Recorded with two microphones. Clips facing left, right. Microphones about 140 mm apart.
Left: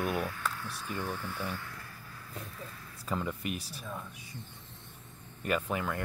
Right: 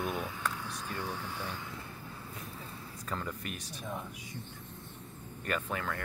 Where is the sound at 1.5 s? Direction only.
20° right (ahead or behind).